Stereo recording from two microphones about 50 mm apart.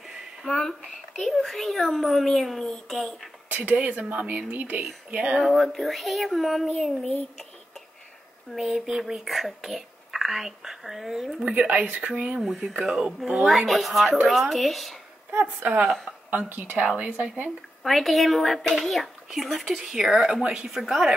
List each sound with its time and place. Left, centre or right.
0.5 s speech: centre
3.4 s a woman's voice: right
5.1 s speech: right
5.4 s speech: centre
8.5 s speech: centre
11.4 s speech: right
12.4 s speech: centre
15.4 s a woman's voice: right
16.8 s a woman's voice: right
17.8 s a woman's voice: centre